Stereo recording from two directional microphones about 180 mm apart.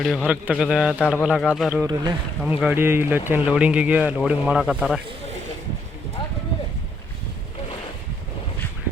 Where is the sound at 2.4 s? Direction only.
5° right (ahead or behind).